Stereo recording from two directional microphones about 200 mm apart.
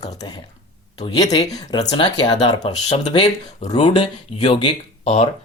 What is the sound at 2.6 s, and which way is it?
Speech, 30° left (ahead or behind).